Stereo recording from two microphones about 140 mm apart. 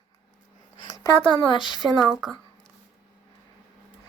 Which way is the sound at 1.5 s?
35° left (ahead or behind).